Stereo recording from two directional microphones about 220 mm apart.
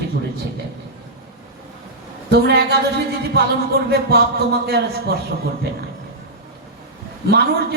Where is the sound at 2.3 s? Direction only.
50° right (ahead or behind).